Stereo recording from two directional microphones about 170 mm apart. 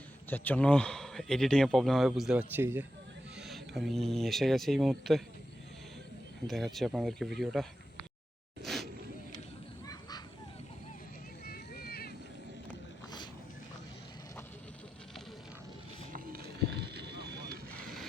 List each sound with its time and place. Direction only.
0.3 s speech: 10° left (ahead or behind); by 2.8 s 10° right (ahead or behind)
3.3 s speech: centre (ahead or behind)
6.5 s speech: centre (ahead or behind)
8.6 s a sound: centre (ahead or behind)
9.8 s goose: 20° left (ahead or behind)
11.4 s a sound: 65° left (ahead or behind)
16.1 s vehicle: 60° right (ahead or behind)